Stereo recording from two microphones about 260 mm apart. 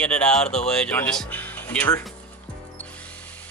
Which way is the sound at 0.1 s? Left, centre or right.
Centre.